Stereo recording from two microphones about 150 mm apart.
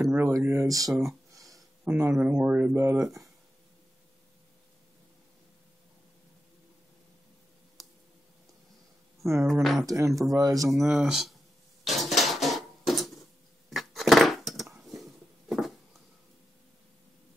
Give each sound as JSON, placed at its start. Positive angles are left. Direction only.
{"t": 0.0, "sound": "speech", "side_deg": -20}
{"t": 1.3, "sound": "a sound", "side_deg": -20}
{"t": 1.9, "sound": "speech", "side_deg": -10}
{"t": 9.5, "sound": "speech", "side_deg": 0}
{"t": 9.8, "sound": "speech", "side_deg": -20}
{"t": 10.7, "sound": "speech", "side_deg": -5}
{"t": 11.8, "sound": "dishes", "side_deg": 0}
{"t": 13.7, "sound": "a sound", "side_deg": 0}